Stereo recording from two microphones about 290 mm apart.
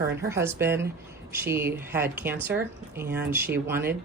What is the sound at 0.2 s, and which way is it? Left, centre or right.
Speech, centre.